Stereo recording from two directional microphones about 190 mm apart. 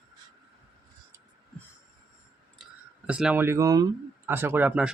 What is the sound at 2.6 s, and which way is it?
Speech, 5° right (ahead or behind).